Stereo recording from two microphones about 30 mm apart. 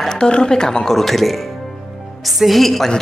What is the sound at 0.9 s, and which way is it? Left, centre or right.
A woman's voice, centre.